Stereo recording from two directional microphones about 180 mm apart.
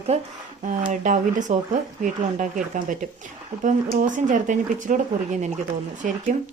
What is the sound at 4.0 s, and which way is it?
A woman's voice, 45° right (ahead or behind).